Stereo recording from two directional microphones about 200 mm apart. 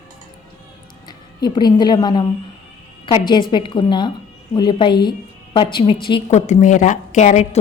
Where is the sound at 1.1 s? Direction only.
20° left (ahead or behind).